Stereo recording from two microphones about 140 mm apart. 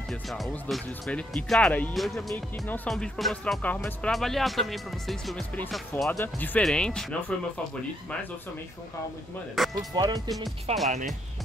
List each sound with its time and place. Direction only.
0.1 s speech: centre (ahead or behind)
6.0 s speech: 15° left (ahead or behind)
9.8 s speech: 25° right (ahead or behind)
10.7 s speech: 45° right (ahead or behind)